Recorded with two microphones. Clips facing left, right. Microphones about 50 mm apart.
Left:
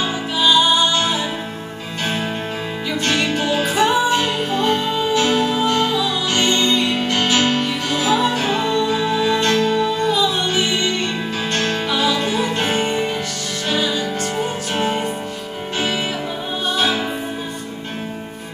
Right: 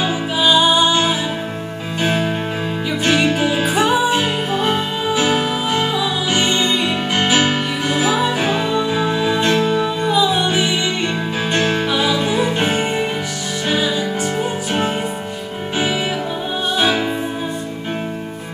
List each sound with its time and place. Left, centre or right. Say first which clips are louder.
0.0 s music: right 2 dB; centre
3.1 s music: right 4 dB; centre
11.9 s music: right 1 dB; centre